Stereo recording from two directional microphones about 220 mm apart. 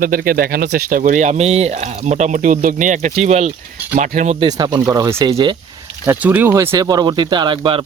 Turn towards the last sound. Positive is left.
turn(degrees=-20)  # may be behind; listen again after turning